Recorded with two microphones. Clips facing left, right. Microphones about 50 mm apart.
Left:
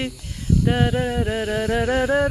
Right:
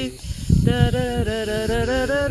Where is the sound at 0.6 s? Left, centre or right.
Centre.